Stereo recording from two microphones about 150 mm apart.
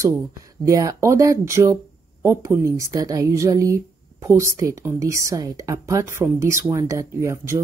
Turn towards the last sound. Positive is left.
turn(degrees=-20)  # may be behind; listen again after turning